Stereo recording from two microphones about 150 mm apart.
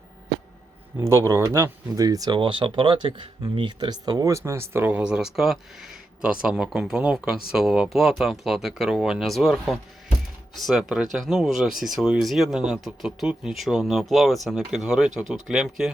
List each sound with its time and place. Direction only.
0.9 s speech: 15° right (ahead or behind)